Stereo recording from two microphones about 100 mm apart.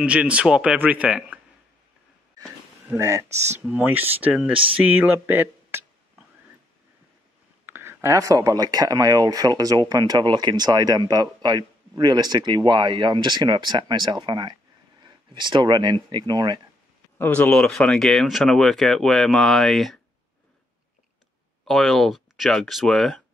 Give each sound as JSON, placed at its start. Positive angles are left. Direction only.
{"t": 0.0, "sound": "speech", "side_deg": -10}
{"t": 3.0, "sound": "speech", "side_deg": -30}
{"t": 3.6, "sound": "speech", "side_deg": -15}
{"t": 7.6, "sound": "speech", "side_deg": -25}
{"t": 17.2, "sound": "speech", "side_deg": 15}
{"t": 21.6, "sound": "speech", "side_deg": 0}